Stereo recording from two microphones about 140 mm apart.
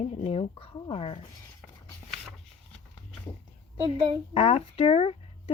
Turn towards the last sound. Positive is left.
turn(degrees=40)  # may be behind; listen again after turning